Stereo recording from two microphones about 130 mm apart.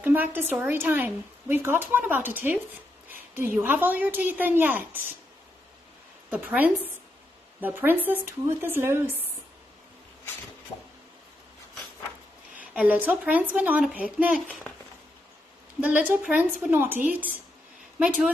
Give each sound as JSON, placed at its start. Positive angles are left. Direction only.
{"t": 0.0, "sound": "speech", "side_deg": -15}
{"t": 6.3, "sound": "speech", "side_deg": -10}
{"t": 12.5, "sound": "speech", "side_deg": -10}
{"t": 15.8, "sound": "speech", "side_deg": -10}